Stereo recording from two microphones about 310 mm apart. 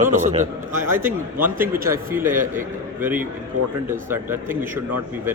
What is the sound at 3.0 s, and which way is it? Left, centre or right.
Speech, centre.